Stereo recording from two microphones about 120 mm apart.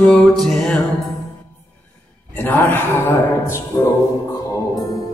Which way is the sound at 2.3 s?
15° left (ahead or behind).